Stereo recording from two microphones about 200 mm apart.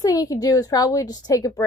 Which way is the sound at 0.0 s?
20° left (ahead or behind).